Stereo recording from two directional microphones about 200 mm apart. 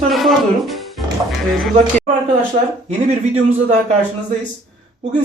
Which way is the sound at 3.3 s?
35° right (ahead or behind).